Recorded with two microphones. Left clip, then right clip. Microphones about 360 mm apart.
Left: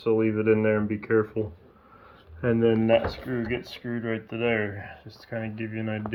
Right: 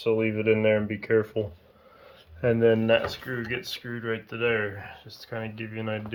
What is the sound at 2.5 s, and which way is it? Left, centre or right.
Speech, centre.